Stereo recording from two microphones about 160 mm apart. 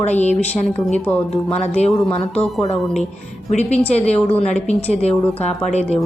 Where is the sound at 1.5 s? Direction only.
45° left (ahead or behind).